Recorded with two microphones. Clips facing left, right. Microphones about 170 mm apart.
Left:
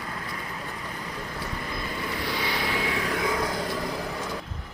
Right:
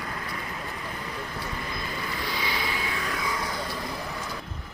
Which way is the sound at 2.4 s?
60° left (ahead or behind).